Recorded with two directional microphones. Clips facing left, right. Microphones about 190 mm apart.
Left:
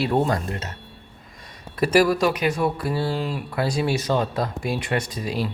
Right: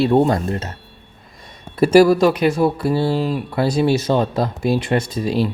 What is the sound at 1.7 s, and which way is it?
Speech, 25° right (ahead or behind).